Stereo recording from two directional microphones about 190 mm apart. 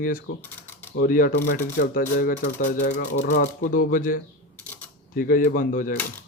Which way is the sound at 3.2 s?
60° left (ahead or behind).